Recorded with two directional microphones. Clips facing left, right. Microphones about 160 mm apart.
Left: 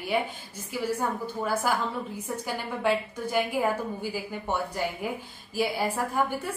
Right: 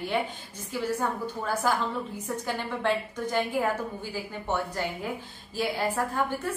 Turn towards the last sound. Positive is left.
turn(degrees=10)  # may be behind; listen again after turning